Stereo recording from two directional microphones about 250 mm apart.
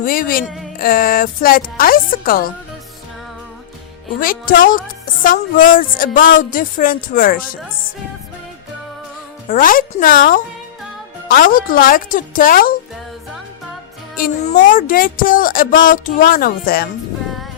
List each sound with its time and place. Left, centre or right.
0.0 s speech: left
0.4 s speech: centre
0.8 s speech: left
4.2 s speech: left
9.5 s speech: left
14.2 s speech: left